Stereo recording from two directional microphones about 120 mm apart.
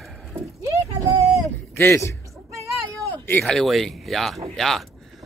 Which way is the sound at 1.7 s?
20° left (ahead or behind).